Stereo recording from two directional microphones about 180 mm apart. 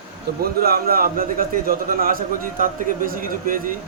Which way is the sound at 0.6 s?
55° right (ahead or behind).